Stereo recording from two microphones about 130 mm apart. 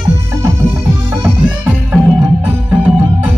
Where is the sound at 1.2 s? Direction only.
15° right (ahead or behind).